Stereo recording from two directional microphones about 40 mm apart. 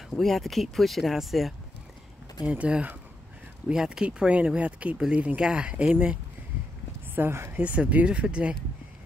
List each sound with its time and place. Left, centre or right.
0.2 s speech: centre
2.4 s speech: right
3.7 s speech: centre
4.0 s speech: right
5.4 s speech: right
7.2 s speech: right
7.5 s speech: right